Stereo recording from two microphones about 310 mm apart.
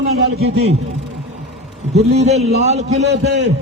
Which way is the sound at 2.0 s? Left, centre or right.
Right.